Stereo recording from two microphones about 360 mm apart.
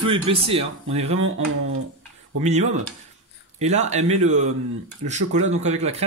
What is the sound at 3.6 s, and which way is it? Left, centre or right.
Speech, centre.